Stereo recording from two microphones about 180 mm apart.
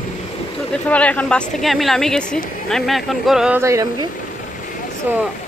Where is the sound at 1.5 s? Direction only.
Centre (ahead or behind).